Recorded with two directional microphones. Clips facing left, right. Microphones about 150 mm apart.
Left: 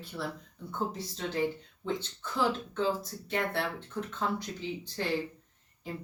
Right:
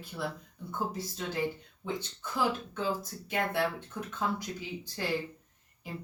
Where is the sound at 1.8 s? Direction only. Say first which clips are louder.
Left 2 dB; 10° right (ahead or behind).